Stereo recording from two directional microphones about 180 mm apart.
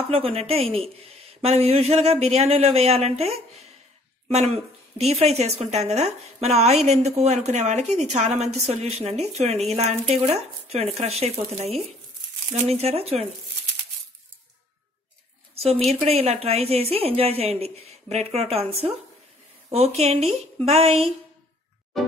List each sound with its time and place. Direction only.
0.1 s a woman's voice: 30° right (ahead or behind)
15.5 s a sound: 35° right (ahead or behind)
15.9 s a woman's voice: 35° right (ahead or behind)